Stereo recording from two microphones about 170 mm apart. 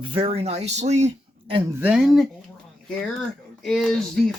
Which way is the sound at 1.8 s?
5° right (ahead or behind).